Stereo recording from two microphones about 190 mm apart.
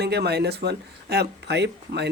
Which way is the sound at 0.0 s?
60° right (ahead or behind).